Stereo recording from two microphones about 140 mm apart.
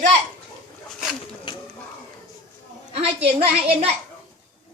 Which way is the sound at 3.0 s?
45° right (ahead or behind).